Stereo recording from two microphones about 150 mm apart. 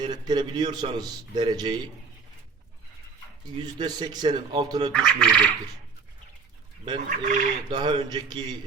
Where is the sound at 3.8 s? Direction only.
30° right (ahead or behind).